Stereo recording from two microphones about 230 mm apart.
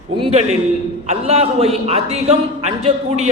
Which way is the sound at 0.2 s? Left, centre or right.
Right.